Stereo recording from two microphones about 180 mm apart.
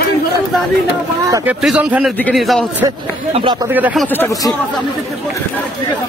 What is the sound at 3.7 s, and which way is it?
Speech, 10° right (ahead or behind).